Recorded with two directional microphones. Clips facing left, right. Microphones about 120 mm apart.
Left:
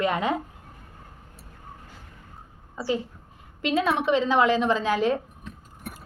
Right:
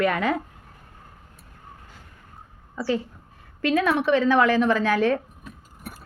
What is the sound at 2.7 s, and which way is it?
A woman's voice, 25° left (ahead or behind).